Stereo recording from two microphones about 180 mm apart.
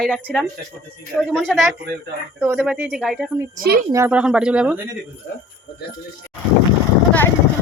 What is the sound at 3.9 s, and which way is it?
Speech, 15° right (ahead or behind).